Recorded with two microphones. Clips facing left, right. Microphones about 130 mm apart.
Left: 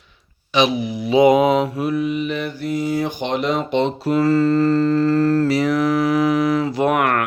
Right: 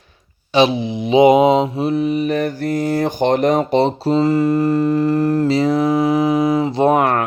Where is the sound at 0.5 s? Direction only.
30° right (ahead or behind).